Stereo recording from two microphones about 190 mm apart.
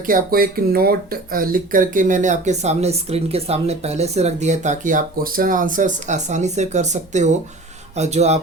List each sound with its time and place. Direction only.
0.0 s speech: 50° right (ahead or behind)